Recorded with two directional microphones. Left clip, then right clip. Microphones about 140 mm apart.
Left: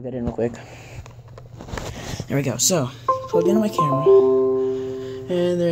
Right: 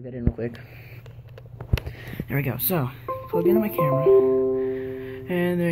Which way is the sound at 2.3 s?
25° left (ahead or behind).